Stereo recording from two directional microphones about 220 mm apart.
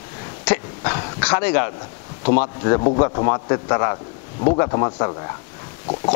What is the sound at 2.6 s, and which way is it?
A man's voice, 20° left (ahead or behind).